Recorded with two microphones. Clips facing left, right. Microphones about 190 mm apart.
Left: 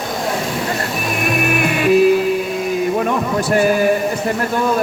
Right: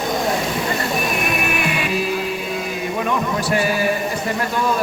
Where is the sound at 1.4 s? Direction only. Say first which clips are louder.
Left 6 dB; 50° left (ahead or behind).